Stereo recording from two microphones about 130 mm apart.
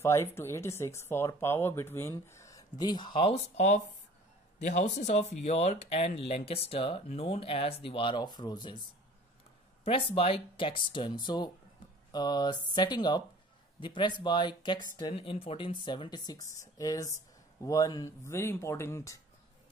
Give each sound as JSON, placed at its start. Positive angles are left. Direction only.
{"t": 0.0, "sound": "speech", "side_deg": 20}
{"t": 3.3, "sound": "speech", "side_deg": 60}
{"t": 9.8, "sound": "speech", "side_deg": 45}
{"t": 15.1, "sound": "speech", "side_deg": 45}